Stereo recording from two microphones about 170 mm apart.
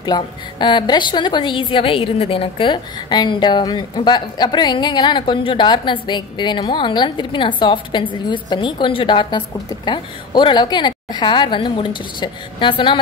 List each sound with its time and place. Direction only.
0.0 s a woman's voice: 25° left (ahead or behind)